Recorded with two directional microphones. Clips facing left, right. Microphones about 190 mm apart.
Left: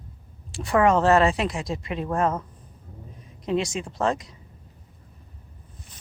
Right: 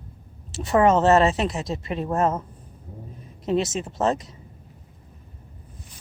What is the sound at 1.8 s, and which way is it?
Speech, 40° right (ahead or behind).